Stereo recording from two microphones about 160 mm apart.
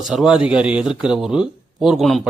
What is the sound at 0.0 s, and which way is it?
A man's voice, 5° right (ahead or behind).